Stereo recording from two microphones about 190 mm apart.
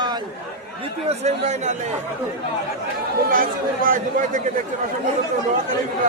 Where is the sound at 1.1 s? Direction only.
35° right (ahead or behind).